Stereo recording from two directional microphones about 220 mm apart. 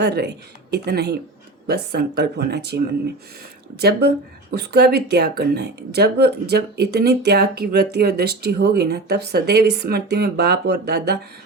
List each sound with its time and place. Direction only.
0.0 s speech: 50° right (ahead or behind)